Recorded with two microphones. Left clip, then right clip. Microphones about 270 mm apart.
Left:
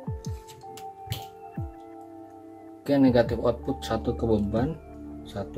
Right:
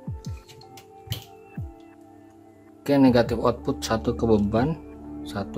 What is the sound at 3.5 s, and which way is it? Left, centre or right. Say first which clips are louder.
Speech: right 2 dB; centre.